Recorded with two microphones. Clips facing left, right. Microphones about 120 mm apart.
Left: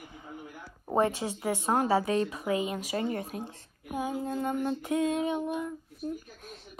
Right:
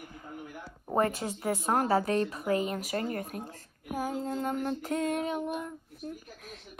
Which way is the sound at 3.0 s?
30° left (ahead or behind).